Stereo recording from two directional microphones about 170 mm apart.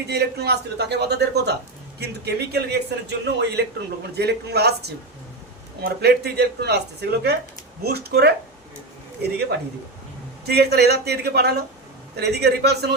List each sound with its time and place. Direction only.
0.1 s a man's voice: 70° right (ahead or behind)